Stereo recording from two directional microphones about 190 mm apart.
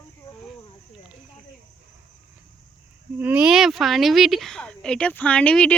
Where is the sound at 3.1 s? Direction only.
10° right (ahead or behind).